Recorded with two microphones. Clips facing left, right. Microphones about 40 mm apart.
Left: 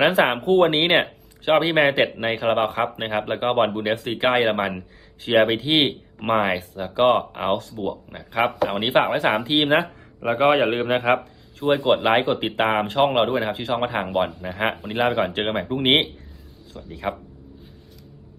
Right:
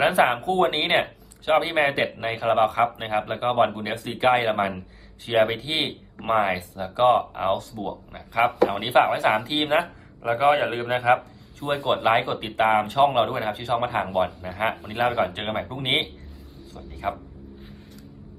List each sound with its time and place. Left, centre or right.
0.0 s a man's voice: left
11.6 s speech: left
14.8 s speech: left
15.2 s a man's voice: left
15.5 s speech: left